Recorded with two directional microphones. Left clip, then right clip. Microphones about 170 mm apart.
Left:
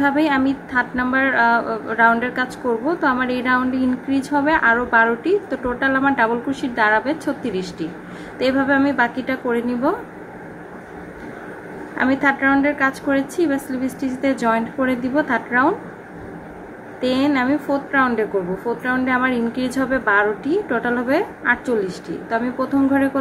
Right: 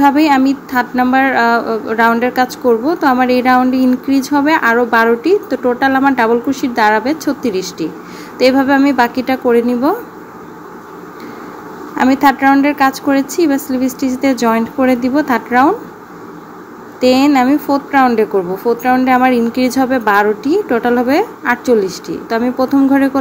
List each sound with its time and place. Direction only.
0.0 s speech: 20° right (ahead or behind)
12.0 s speech: 20° right (ahead or behind)
17.0 s speech: 25° right (ahead or behind)